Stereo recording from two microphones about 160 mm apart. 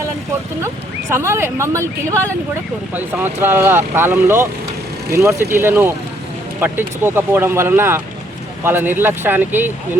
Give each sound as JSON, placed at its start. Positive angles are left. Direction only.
{"t": 1.1, "sound": "speech", "side_deg": -15}